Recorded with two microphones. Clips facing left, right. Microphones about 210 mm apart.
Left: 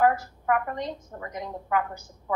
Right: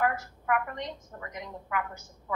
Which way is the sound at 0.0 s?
35° left (ahead or behind).